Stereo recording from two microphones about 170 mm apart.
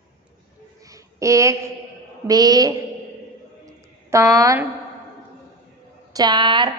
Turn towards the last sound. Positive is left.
turn(degrees=-25)  # may be behind; listen again after turning